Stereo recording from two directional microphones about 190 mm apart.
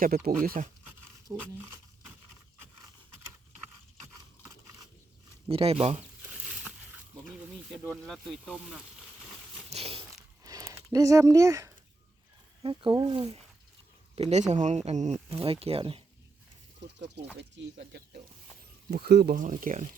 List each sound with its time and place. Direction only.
0.0 s speech: 50° right (ahead or behind)
1.3 s speech: 10° right (ahead or behind)
4.0 s a sound: 15° right (ahead or behind)
5.5 s speech: 30° right (ahead or behind)
6.4 s a sound: centre (ahead or behind)
7.7 s speech: centre (ahead or behind)
9.6 s biting: 30° right (ahead or behind)
10.4 s a sound: 15° right (ahead or behind)
10.9 s speech: 15° right (ahead or behind)
14.2 s speech: 35° right (ahead or behind)
16.8 s speech: 70° right (ahead or behind)
18.9 s speech: 55° right (ahead or behind)